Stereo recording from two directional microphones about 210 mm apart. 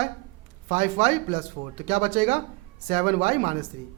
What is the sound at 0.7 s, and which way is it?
A man's voice, 30° right (ahead or behind).